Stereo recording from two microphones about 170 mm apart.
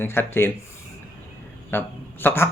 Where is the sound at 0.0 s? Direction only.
15° left (ahead or behind).